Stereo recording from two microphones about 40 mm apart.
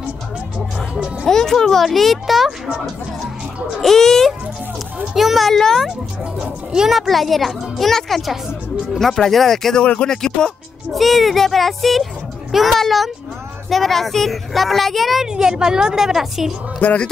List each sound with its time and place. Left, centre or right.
0.7 s music: right
1.2 s speech: centre
3.8 s a child's voice: centre
5.1 s speech: centre
5.5 s speech: centre
10.9 s speech: centre
15.2 s a woman's voice: centre
16.8 s speech: left